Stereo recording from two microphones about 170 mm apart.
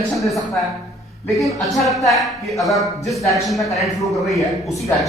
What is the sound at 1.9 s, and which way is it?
A man's voice, centre (ahead or behind).